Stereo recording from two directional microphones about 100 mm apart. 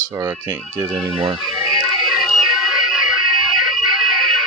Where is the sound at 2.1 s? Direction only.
5° right (ahead or behind).